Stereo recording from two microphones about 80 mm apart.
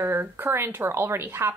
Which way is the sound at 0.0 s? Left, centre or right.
Right.